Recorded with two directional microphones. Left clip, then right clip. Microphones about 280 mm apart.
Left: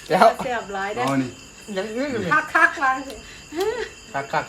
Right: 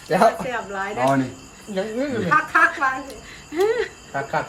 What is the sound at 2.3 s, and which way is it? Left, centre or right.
Speech, left.